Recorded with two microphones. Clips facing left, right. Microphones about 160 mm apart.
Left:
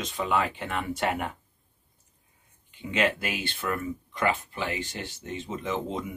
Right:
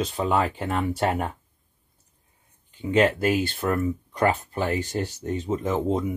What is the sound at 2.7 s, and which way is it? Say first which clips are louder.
Speech: right 6 dB; 40° right (ahead or behind).